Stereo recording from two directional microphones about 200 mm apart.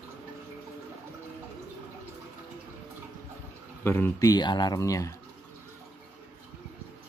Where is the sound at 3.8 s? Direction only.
10° left (ahead or behind).